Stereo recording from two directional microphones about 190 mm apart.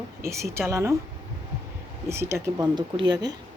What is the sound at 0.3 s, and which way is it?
Speech, 15° right (ahead or behind).